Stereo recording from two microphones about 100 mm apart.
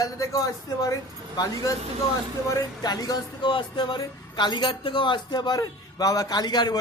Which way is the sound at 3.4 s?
55° left (ahead or behind).